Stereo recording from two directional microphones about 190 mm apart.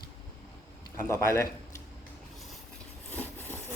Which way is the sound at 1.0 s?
15° left (ahead or behind).